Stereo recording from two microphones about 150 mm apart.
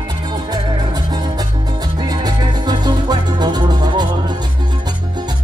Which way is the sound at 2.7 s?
30° right (ahead or behind).